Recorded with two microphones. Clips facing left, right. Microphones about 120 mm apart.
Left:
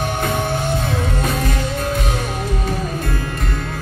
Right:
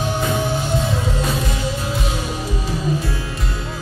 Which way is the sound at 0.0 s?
55° left (ahead or behind).